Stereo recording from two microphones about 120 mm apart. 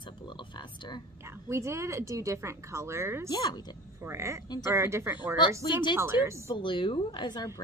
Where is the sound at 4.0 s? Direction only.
20° right (ahead or behind).